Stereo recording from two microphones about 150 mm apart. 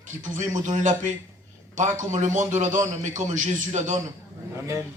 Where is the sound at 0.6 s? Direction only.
55° right (ahead or behind).